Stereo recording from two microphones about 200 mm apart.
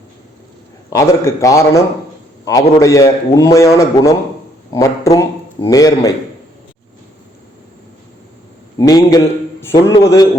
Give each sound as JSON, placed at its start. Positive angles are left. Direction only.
{"t": 0.9, "sound": "a man's voice", "side_deg": 15}
{"t": 8.8, "sound": "a man's voice", "side_deg": 20}